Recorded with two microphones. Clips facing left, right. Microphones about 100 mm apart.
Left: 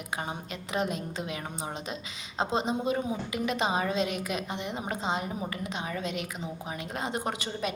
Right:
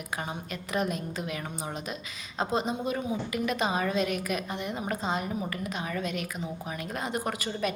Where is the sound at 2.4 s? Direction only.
25° left (ahead or behind).